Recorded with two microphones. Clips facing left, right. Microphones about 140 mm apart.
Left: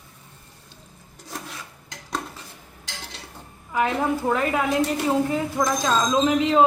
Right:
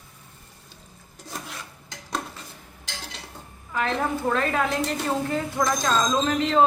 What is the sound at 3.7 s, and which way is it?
A woman's voice, 10° left (ahead or behind).